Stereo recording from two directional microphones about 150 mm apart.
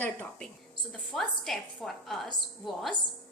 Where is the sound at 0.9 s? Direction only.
Centre (ahead or behind).